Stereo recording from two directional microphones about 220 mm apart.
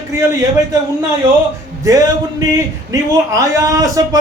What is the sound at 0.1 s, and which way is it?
Speech, 15° right (ahead or behind).